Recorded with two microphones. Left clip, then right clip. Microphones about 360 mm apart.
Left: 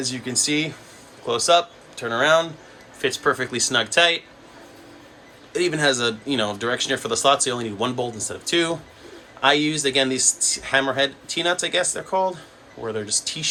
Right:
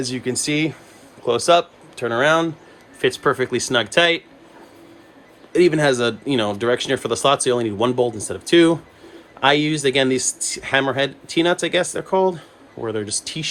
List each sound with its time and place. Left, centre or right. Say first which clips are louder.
0.0 s speech: right 1 dB; centre
5.5 s speech: right 5 dB; centre